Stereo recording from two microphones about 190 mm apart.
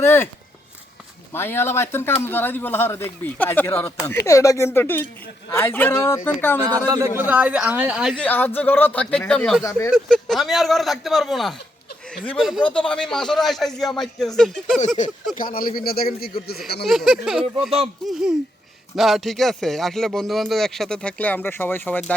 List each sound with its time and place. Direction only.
0.0 s speech: 10° left (ahead or behind)
1.3 s speech: 10° left (ahead or behind)
6.7 s a man's voice: 20° right (ahead or behind)
7.2 s speech: 10° right (ahead or behind)
8.2 s speech: 10° left (ahead or behind)
9.6 s speech: 15° left (ahead or behind)
9.9 s speech: centre (ahead or behind)
14.8 s a man's voice: 40° left (ahead or behind)
16.8 s speech: centre (ahead or behind)